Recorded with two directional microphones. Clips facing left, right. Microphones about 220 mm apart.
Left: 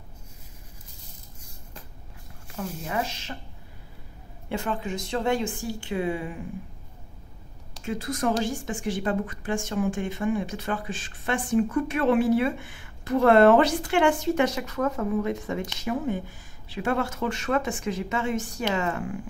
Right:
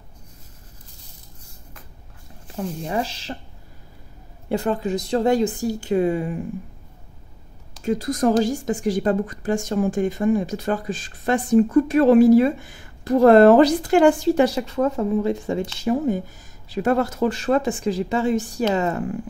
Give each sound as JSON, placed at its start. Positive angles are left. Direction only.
{"t": 2.5, "sound": "a woman's voice", "side_deg": -30}
{"t": 4.5, "sound": "a woman's voice", "side_deg": -40}
{"t": 7.8, "sound": "a woman's voice", "side_deg": -40}